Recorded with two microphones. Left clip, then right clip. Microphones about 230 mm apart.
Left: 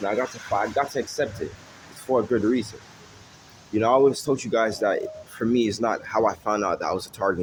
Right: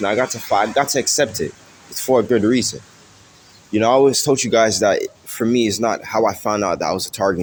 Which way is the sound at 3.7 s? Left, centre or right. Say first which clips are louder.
Right 5 dB; right.